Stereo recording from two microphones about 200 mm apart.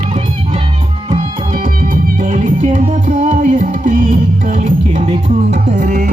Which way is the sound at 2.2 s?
40° right (ahead or behind).